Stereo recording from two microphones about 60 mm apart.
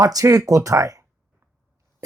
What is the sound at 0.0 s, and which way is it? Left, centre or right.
Speech, right.